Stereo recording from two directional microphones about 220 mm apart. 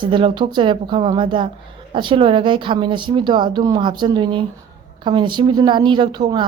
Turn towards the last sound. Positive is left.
turn(degrees=-20)  # may be behind; listen again after turning